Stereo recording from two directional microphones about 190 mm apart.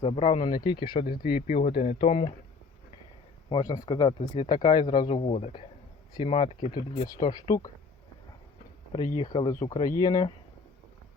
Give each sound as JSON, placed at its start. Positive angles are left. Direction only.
{"t": 0.0, "sound": "speech", "side_deg": 30}
{"t": 1.3, "sound": "speech", "side_deg": 50}
{"t": 1.5, "sound": "speech", "side_deg": 30}
{"t": 3.5, "sound": "speech", "side_deg": 20}
{"t": 6.6, "sound": "speech", "side_deg": 50}
{"t": 6.9, "sound": "speech", "side_deg": 20}
{"t": 9.3, "sound": "speech", "side_deg": 20}